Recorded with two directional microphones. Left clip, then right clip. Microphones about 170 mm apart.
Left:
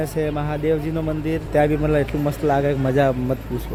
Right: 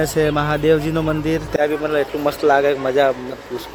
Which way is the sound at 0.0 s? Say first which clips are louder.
Right 6 dB; 20° right (ahead or behind).